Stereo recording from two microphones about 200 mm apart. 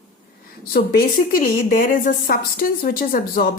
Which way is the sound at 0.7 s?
45° left (ahead or behind).